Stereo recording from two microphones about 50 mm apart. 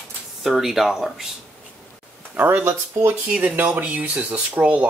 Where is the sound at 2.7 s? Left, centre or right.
Right.